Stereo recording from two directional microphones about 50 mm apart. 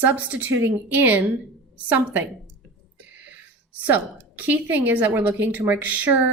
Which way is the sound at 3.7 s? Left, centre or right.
Right.